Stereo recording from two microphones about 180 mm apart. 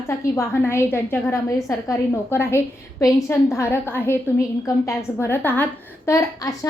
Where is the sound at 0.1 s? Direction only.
15° left (ahead or behind).